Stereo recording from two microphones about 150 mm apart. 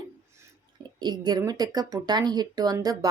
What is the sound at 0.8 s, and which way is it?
Speech, 30° right (ahead or behind).